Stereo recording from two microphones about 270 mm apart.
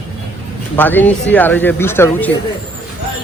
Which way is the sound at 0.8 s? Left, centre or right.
Centre.